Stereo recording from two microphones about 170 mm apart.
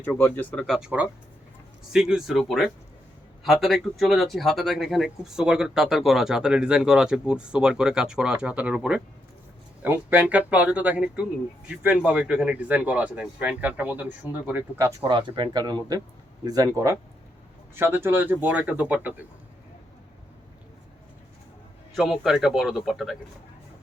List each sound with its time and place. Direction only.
0.0 s speech: 10° left (ahead or behind)
0.8 s speech: 5° right (ahead or behind)
15.0 s speech: 25° right (ahead or behind); by 18.9 s 10° right (ahead or behind)
21.9 s speech: centre (ahead or behind)